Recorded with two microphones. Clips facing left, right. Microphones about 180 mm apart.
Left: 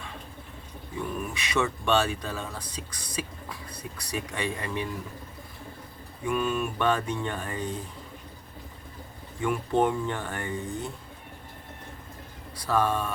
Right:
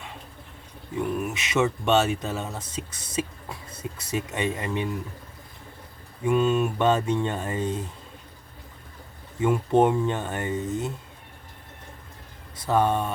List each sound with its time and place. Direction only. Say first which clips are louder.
1.3 s speech: right 4 dB; 20° right (ahead or behind)
6.2 s speech: right 6 dB; 25° right (ahead or behind)
9.4 s speech: right 5 dB; 20° right (ahead or behind)
12.5 s speech: right 3 dB; 20° right (ahead or behind)